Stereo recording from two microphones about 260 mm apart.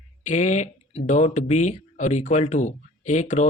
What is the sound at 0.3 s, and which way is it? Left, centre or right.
Speech, left.